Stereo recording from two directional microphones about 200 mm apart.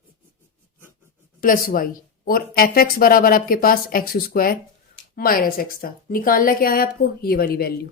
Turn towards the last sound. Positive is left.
turn(degrees=50)  # may be behind; listen again after turning